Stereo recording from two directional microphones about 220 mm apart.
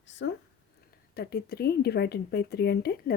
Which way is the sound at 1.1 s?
45° left (ahead or behind).